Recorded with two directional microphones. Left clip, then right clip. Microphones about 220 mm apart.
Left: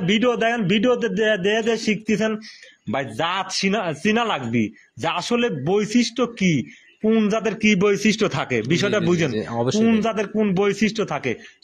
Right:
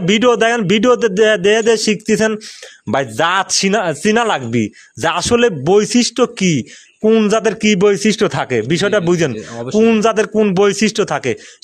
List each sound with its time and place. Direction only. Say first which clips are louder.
0.0 s speech: right 7 dB; 55° right (ahead or behind)
9.3 s speech: left 1 dB; 15° left (ahead or behind)
9.8 s speech: right 12 dB; 50° right (ahead or behind)